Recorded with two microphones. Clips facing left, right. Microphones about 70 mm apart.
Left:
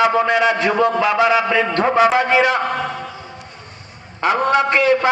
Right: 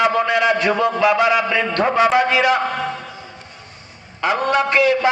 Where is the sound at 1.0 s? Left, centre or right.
Centre.